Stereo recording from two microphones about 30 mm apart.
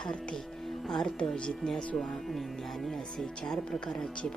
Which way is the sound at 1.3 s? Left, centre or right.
Left.